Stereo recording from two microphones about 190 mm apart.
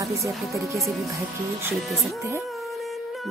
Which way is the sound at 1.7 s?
Centre (ahead or behind).